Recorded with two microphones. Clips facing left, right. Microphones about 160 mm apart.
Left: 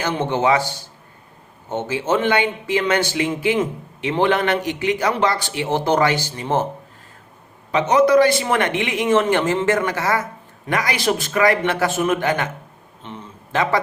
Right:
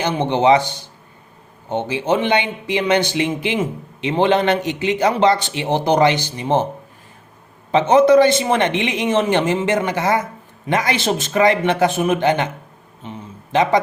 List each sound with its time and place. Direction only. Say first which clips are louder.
0.0 s a man's voice: right 3 dB; 15° right (ahead or behind)
7.7 s a man's voice: right 3 dB; 25° right (ahead or behind)
13.5 s a man's voice: right 4 dB; 20° right (ahead or behind)